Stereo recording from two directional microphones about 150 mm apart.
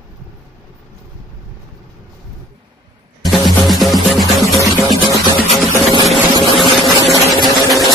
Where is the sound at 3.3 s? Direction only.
Centre (ahead or behind).